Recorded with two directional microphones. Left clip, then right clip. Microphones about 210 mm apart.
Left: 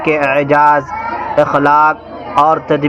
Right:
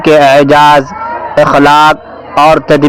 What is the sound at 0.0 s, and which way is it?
A man's voice, 40° right (ahead or behind).